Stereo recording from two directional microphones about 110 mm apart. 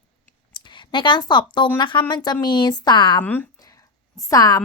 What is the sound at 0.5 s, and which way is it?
A woman's voice, 45° left (ahead or behind).